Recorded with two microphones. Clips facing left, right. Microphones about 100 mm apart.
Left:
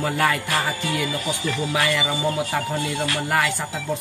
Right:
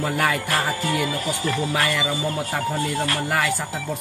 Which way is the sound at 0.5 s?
40° right (ahead or behind).